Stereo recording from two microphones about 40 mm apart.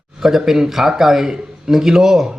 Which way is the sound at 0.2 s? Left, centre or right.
Centre.